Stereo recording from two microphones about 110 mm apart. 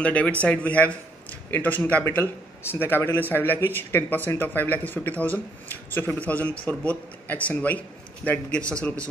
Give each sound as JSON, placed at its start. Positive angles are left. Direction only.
{"t": 0.0, "sound": "speech", "side_deg": 10}